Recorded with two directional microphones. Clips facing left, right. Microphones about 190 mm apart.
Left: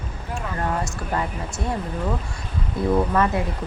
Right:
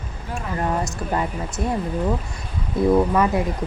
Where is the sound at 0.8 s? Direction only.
20° right (ahead or behind).